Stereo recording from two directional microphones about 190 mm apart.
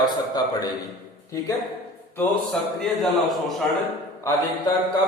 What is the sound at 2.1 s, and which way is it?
A man's voice, centre (ahead or behind).